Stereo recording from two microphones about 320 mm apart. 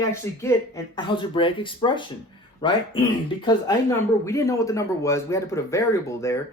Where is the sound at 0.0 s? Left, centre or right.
Centre.